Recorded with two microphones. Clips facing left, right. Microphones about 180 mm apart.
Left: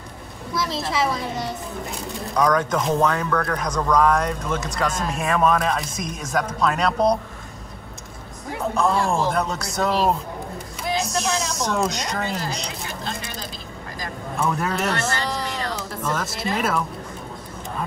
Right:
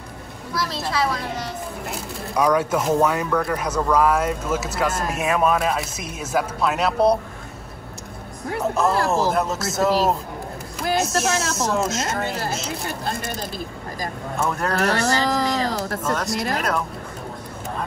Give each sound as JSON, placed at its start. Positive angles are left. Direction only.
{"t": 0.5, "sound": "speech", "side_deg": 0}
{"t": 8.5, "sound": "speech", "side_deg": -5}
{"t": 12.8, "sound": "speech", "side_deg": -55}
{"t": 14.5, "sound": "speech", "side_deg": 0}
{"t": 15.1, "sound": "a sound", "side_deg": -40}
{"t": 16.0, "sound": "speech", "side_deg": 0}